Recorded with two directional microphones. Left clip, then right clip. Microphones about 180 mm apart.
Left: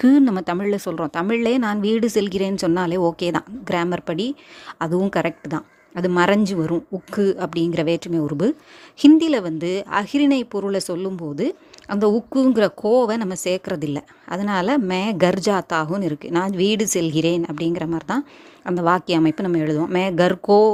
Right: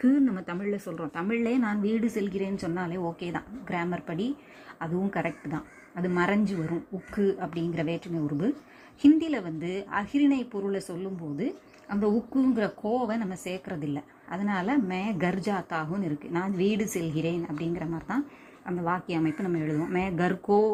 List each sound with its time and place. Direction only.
0.0 s speech: 55° left (ahead or behind)